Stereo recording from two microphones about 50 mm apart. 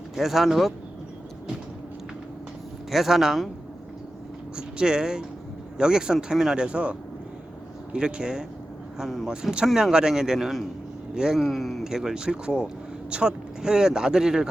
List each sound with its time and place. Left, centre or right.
0.2 s speech: centre
2.9 s speech: centre
4.5 s speech: centre
7.9 s speech: centre
9.3 s speech: centre
11.3 s speech: centre